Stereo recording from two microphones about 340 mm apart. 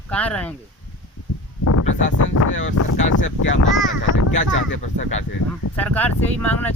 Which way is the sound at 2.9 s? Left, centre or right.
Left.